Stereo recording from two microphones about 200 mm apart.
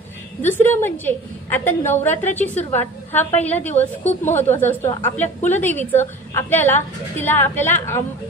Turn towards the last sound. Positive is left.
turn(degrees=10)  # may be behind; listen again after turning